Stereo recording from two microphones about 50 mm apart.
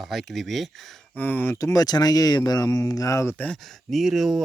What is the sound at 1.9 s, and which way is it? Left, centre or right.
Speech, left.